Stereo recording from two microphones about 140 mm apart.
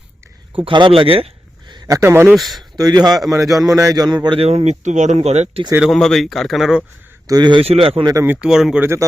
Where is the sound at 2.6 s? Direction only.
30° right (ahead or behind).